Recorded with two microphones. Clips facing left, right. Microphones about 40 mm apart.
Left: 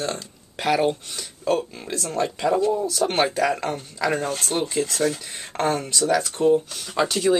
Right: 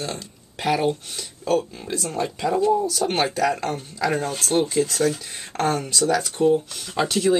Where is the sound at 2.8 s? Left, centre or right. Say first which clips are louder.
Left 1 dB; centre.